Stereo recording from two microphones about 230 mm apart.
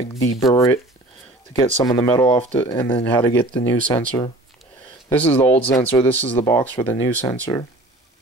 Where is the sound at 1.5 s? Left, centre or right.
Centre.